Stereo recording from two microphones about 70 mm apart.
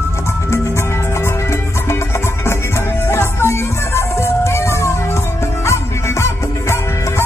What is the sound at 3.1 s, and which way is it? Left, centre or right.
Music, left.